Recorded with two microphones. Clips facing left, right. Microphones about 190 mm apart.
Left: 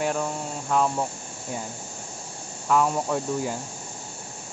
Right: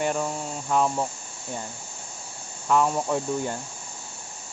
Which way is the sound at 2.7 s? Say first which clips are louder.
Even; centre (ahead or behind).